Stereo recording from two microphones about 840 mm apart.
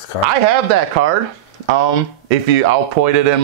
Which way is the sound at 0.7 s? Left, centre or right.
Right.